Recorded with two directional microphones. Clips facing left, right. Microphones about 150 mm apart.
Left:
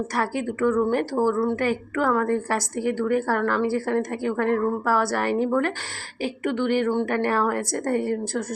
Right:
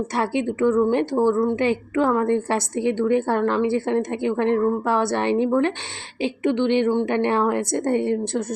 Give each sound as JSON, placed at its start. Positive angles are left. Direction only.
{"t": 0.1, "sound": "a woman's voice", "side_deg": -25}